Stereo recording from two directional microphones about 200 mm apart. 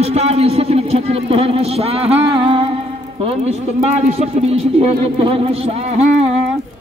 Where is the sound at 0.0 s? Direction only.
30° right (ahead or behind).